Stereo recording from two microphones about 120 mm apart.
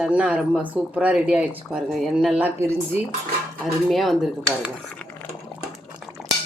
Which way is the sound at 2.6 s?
20° right (ahead or behind).